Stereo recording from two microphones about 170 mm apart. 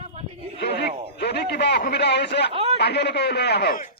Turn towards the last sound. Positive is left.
turn(degrees=75)  # may be behind; listen again after turning